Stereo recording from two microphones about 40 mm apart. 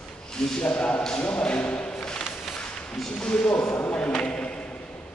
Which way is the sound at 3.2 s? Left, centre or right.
Left.